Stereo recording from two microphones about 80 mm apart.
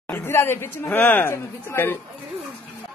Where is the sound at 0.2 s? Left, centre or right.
Left.